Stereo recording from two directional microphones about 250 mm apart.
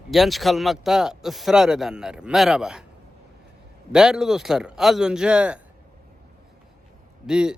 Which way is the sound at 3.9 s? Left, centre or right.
Centre.